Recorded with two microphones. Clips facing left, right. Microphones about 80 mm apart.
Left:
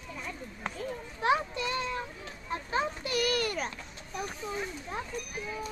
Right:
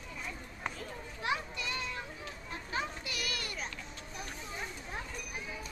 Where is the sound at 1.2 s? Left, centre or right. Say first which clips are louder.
Left 8 dB; left.